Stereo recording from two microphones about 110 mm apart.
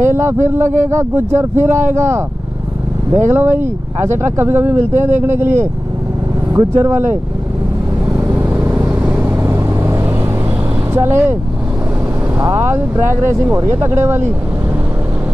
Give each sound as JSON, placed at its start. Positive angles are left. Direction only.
{"t": 0.0, "sound": "speech", "side_deg": -25}
{"t": 6.5, "sound": "speech", "side_deg": -25}
{"t": 8.3, "sound": "vehicle", "side_deg": -15}
{"t": 10.9, "sound": "speech", "side_deg": -20}
{"t": 12.5, "sound": "speech", "side_deg": -25}